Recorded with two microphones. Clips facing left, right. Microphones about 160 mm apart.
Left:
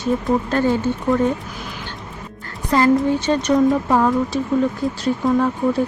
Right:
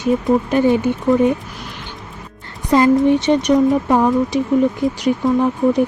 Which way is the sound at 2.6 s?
20° right (ahead or behind).